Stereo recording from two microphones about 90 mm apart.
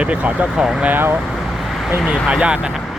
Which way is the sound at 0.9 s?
25° right (ahead or behind).